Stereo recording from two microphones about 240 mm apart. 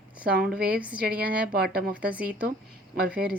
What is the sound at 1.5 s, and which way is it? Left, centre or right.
Speech, right.